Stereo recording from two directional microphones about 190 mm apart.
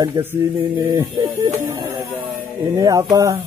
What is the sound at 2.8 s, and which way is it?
Speech, 20° right (ahead or behind).